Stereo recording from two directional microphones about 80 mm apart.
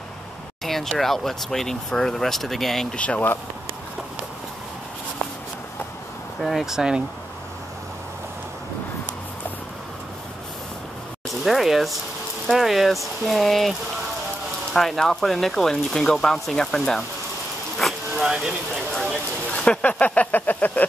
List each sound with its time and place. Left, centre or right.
0.7 s speech: centre
3.0 s speech: centre
6.4 s speech: centre
11.4 s speech: centre
18.1 s a sound: centre
19.5 s speech: centre